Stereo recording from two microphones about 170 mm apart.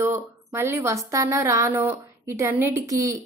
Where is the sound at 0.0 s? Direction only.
15° right (ahead or behind).